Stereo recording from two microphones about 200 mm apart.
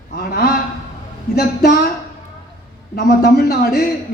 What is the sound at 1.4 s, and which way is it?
Speech, 50° left (ahead or behind).